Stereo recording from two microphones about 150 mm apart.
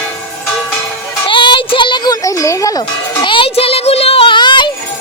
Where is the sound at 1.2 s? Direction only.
30° left (ahead or behind).